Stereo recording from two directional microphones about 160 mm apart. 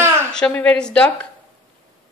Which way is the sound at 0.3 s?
5° left (ahead or behind).